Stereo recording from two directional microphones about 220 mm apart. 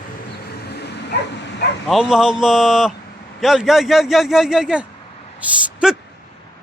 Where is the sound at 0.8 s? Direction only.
50° left (ahead or behind).